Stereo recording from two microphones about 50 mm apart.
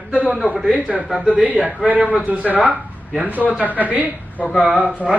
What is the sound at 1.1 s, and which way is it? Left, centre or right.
Speech, centre.